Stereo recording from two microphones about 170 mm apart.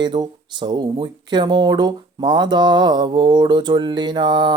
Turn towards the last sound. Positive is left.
turn(degrees=-25)  # may be behind; listen again after turning